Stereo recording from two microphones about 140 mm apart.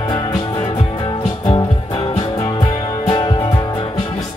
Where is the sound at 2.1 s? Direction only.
35° left (ahead or behind).